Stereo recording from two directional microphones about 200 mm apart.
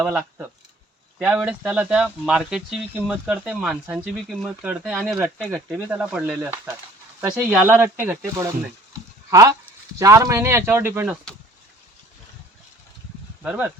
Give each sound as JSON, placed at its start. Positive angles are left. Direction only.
{"t": 0.0, "sound": "speech", "side_deg": -5}
{"t": 8.9, "sound": "a sound", "side_deg": -15}
{"t": 10.0, "sound": "speech", "side_deg": -15}
{"t": 13.4, "sound": "speech", "side_deg": -5}